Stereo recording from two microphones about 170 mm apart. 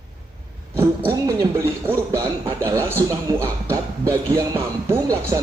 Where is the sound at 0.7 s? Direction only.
15° right (ahead or behind).